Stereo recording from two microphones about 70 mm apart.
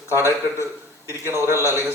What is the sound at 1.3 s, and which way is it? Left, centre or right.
Speech, right.